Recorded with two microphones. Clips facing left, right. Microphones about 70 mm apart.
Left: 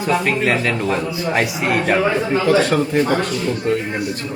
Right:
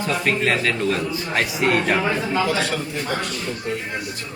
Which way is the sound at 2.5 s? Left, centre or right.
Left.